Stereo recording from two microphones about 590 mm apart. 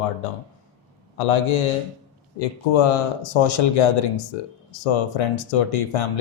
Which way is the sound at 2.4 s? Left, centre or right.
Left.